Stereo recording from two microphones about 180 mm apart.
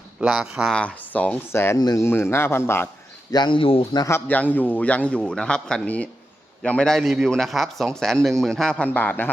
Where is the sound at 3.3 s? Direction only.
25° left (ahead or behind).